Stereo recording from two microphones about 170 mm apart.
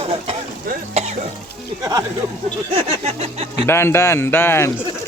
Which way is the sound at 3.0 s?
35° right (ahead or behind).